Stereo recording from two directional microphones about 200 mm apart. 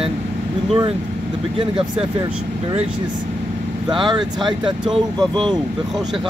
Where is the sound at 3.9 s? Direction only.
25° right (ahead or behind).